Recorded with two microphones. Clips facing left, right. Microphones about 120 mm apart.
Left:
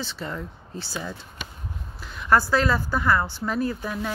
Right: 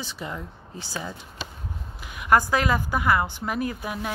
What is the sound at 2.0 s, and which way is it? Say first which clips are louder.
Speech: even; 15° right (ahead or behind).